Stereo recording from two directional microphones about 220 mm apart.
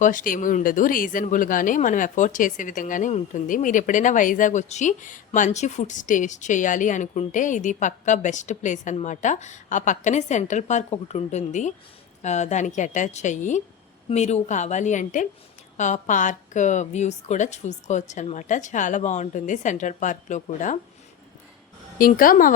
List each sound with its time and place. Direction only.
0.0 s speech: 35° left (ahead or behind)
21.9 s speech: 40° left (ahead or behind)